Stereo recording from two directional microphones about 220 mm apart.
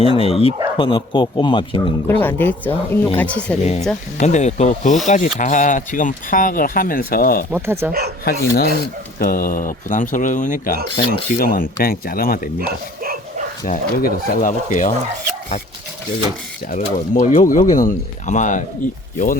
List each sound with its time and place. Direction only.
0.0 s speech: 25° left (ahead or behind)
2.0 s speech: 10° left (ahead or behind)
4.2 s speech: 30° left (ahead or behind)
7.5 s speech: 10° right (ahead or behind)
8.2 s speech: 45° left (ahead or behind)
12.5 s speech: 40° right (ahead or behind)
13.7 s speech: 40° left (ahead or behind)
16.7 s speech: 35° left (ahead or behind)